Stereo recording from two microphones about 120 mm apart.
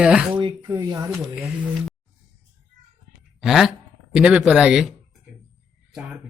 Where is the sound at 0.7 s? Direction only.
30° right (ahead or behind).